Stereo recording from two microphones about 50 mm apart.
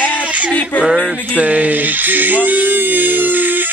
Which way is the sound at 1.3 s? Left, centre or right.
Right.